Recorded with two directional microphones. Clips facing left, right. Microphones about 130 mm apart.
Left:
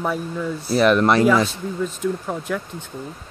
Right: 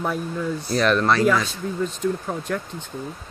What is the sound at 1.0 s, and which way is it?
Speech, 20° left (ahead or behind).